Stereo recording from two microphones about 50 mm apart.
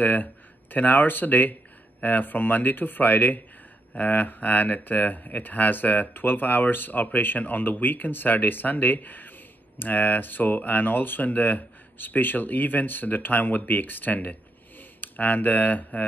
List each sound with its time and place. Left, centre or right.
0.0 s speech: left